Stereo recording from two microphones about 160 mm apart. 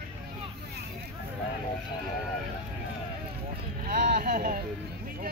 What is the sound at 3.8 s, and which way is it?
Speech, 65° right (ahead or behind).